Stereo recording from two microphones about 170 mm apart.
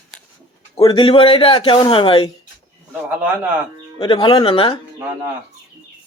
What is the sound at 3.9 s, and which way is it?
Speech, 30° left (ahead or behind).